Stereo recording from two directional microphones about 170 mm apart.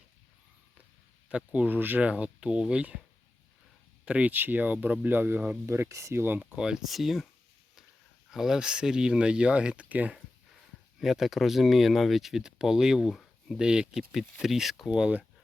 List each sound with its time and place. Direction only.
1.3 s speech: 5° right (ahead or behind)
4.0 s speech: 5° right (ahead or behind)
8.3 s speech: centre (ahead or behind)